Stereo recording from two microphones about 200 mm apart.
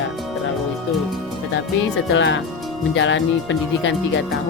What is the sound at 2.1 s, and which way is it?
Speech, 65° left (ahead or behind).